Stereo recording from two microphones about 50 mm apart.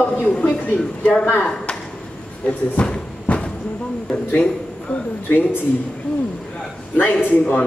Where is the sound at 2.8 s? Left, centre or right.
Left.